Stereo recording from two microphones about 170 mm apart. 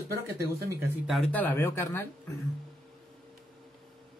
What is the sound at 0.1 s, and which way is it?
Speech, 20° right (ahead or behind).